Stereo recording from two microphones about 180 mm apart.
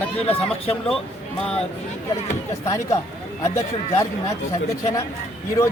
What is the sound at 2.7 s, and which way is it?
Speech, 15° left (ahead or behind).